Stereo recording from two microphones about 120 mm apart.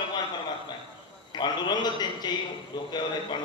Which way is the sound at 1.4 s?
35° left (ahead or behind).